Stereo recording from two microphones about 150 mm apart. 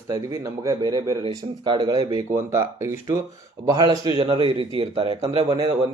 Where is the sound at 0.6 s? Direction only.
25° right (ahead or behind); by 5.5 s 40° right (ahead or behind).